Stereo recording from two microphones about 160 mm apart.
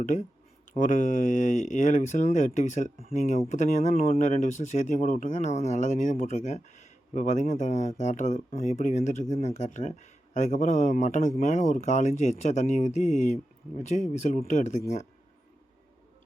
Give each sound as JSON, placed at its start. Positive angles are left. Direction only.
{"t": 0.0, "sound": "speech", "side_deg": 50}